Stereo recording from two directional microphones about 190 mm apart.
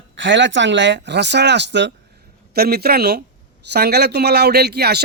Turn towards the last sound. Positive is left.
turn(degrees=-60)  # may be behind; listen again after turning